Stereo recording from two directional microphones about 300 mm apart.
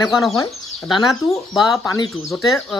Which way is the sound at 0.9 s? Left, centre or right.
Centre.